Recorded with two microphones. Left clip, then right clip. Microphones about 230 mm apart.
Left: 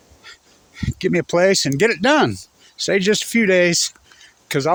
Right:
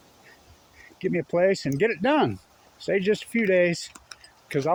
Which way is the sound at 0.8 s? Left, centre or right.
Left.